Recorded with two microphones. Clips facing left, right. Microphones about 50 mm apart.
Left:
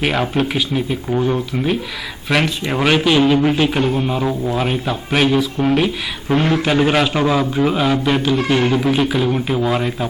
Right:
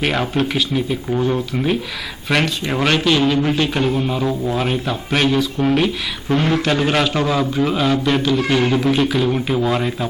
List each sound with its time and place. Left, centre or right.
0.0 s a man's voice: centre